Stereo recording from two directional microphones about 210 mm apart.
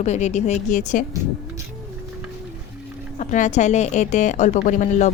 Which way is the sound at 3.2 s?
35° left (ahead or behind).